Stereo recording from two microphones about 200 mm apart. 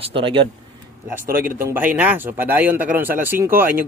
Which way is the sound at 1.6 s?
10° right (ahead or behind).